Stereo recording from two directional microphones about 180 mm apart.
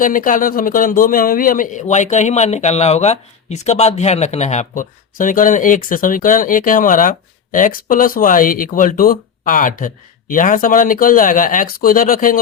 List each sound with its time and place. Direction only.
0.0 s a man's voice: 50° left (ahead or behind)